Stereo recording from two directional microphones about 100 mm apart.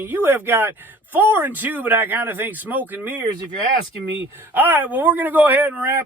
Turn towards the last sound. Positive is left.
turn(degrees=-20)  # may be behind; listen again after turning